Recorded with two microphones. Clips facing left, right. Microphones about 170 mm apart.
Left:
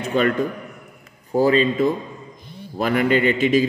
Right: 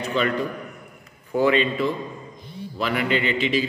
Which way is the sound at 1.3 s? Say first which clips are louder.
Left 3 dB; 35° left (ahead or behind).